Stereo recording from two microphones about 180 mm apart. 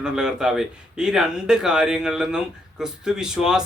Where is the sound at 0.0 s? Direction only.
5° right (ahead or behind).